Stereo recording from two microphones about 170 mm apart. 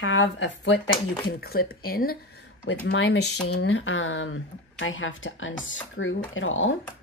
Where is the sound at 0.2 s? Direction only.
90° left.